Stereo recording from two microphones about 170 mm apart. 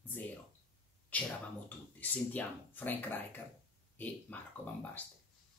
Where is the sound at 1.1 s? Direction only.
10° left (ahead or behind).